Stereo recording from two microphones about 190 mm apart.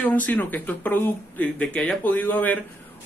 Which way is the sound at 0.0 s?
10° left (ahead or behind).